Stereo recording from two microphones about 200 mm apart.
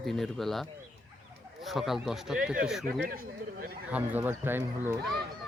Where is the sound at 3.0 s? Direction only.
45° right (ahead or behind).